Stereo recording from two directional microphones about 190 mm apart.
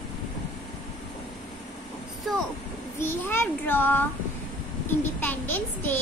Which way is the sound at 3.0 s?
10° left (ahead or behind).